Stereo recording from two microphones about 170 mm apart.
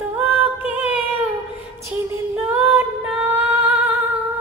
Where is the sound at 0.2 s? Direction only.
10° right (ahead or behind).